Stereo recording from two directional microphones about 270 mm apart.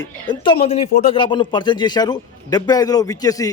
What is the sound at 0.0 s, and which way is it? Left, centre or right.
Speech, centre.